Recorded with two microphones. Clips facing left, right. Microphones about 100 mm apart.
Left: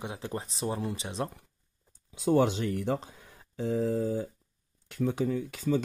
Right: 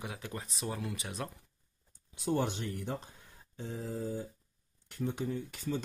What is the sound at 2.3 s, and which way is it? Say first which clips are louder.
Speech: left 8 dB; 90° left.